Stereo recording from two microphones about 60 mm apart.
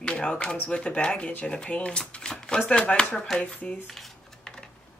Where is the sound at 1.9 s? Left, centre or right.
Centre.